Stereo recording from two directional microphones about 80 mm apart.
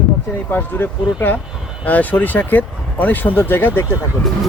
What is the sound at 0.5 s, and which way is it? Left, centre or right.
Speech, left.